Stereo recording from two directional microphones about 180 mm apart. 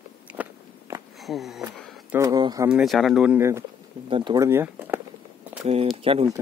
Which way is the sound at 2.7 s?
5° right (ahead or behind).